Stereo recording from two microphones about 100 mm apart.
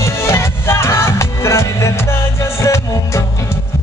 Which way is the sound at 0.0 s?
30° left (ahead or behind).